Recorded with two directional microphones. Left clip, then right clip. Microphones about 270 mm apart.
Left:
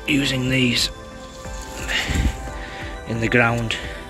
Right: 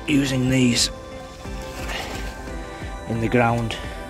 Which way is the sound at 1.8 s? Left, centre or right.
Centre.